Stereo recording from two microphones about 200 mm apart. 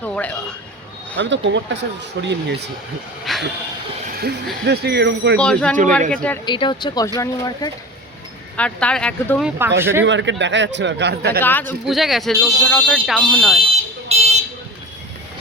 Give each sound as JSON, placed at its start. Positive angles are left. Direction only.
{"t": 0.0, "sound": "a man's voice", "side_deg": 5}
{"t": 1.2, "sound": "speech", "side_deg": -65}
{"t": 3.3, "sound": "speech", "side_deg": 0}
{"t": 4.6, "sound": "speech", "side_deg": -55}
{"t": 5.4, "sound": "speech", "side_deg": 5}
{"t": 6.4, "sound": "speech", "side_deg": 25}
{"t": 8.5, "sound": "speech", "side_deg": 5}
{"t": 9.6, "sound": "speech", "side_deg": -10}
{"t": 10.1, "sound": "speech", "side_deg": -65}
{"t": 11.3, "sound": "speech", "side_deg": 10}
{"t": 11.9, "sound": "speech", "side_deg": 0}
{"t": 13.6, "sound": "a sound", "side_deg": -30}